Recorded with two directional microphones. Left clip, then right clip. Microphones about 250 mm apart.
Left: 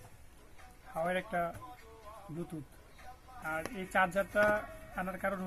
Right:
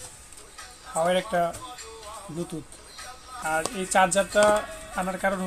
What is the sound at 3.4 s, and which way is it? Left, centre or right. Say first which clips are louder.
Speech: right 11 dB; right.